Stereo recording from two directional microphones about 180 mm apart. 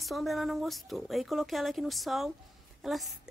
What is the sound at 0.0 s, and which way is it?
Speech, centre (ahead or behind).